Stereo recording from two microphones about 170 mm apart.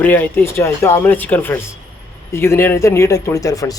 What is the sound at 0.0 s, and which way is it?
Speech, 10° left (ahead or behind).